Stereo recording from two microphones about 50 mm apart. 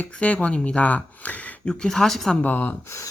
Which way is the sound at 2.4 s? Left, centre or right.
Left.